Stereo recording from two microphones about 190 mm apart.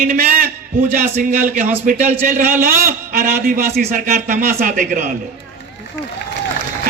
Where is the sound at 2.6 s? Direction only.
45° right (ahead or behind).